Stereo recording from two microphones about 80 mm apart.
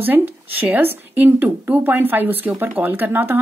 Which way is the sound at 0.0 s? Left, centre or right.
Right.